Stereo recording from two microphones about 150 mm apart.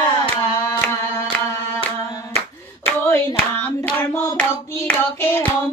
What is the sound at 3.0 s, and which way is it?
Hands, 15° left (ahead or behind).